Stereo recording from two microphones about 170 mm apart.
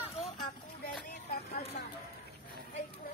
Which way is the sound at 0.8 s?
60° left (ahead or behind).